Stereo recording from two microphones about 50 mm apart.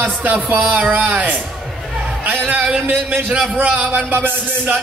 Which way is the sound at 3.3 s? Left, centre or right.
Right.